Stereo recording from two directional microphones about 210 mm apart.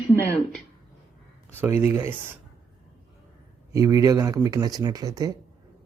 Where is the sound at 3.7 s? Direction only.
15° right (ahead or behind).